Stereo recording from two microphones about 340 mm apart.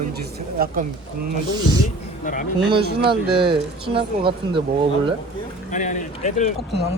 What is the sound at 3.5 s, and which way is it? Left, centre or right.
Speech, centre.